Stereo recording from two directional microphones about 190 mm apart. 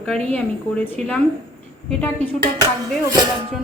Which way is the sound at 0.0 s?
5° left (ahead or behind).